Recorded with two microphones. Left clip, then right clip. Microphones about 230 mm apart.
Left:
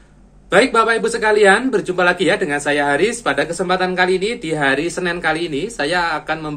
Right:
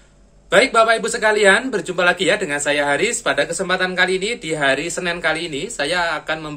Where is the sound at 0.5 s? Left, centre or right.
Centre.